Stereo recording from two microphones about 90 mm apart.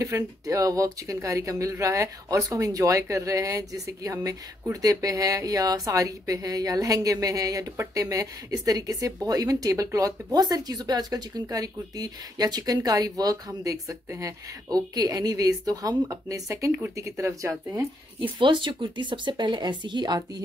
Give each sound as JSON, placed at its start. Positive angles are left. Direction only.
{"t": 0.0, "sound": "speech", "side_deg": -35}
{"t": 18.4, "sound": "speech", "side_deg": -60}